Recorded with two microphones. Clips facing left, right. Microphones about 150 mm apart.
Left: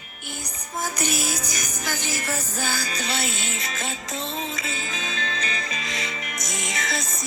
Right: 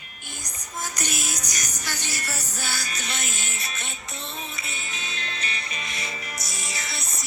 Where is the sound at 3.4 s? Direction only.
90° left.